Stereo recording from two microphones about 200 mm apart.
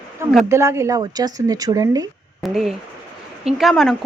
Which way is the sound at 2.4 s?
Centre (ahead or behind).